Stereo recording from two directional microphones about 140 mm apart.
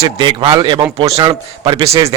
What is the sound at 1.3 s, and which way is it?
Speech, 30° right (ahead or behind).